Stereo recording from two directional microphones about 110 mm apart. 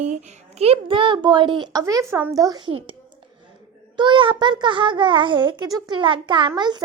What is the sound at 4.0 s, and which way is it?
A child's voice, 50° right (ahead or behind).